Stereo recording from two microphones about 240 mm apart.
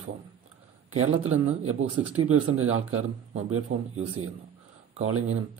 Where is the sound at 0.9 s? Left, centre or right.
Right.